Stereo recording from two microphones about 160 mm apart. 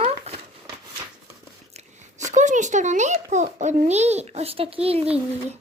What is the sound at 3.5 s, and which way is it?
Speech, 45° right (ahead or behind).